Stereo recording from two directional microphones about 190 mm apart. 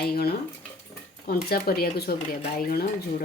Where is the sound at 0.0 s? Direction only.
55° left (ahead or behind).